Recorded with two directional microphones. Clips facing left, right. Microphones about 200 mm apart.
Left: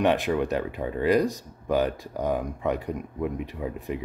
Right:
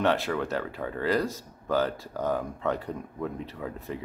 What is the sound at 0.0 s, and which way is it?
Speech, 15° left (ahead or behind).